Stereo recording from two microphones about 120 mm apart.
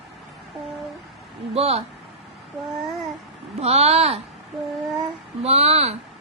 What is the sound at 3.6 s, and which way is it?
Speech, 60° right (ahead or behind).